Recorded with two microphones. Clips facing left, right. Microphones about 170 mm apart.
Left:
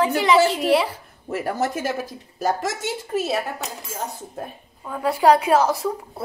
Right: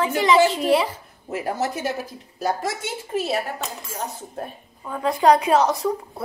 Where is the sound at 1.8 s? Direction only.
90° left.